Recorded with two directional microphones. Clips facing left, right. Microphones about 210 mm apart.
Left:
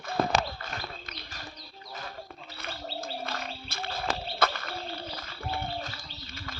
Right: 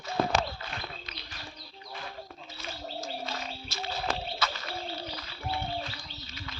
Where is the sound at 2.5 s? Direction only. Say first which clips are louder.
Left 1 dB; 60° left (ahead or behind).